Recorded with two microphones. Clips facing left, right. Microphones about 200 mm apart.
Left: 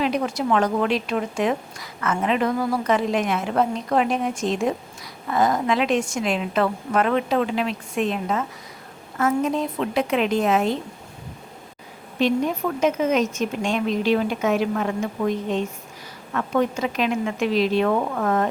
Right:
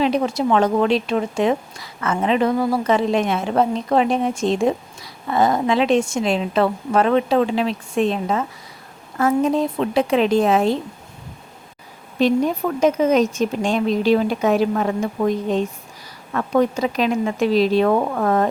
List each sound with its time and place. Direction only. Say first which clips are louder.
0.0 s a woman's voice: right 4 dB; 25° right (ahead or behind)
12.2 s a woman's voice: right 3 dB; 35° right (ahead or behind)